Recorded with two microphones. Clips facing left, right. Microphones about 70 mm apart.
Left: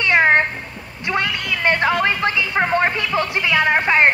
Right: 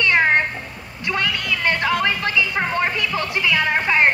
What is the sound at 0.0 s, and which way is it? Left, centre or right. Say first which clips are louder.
Cat: left 2 dB; left.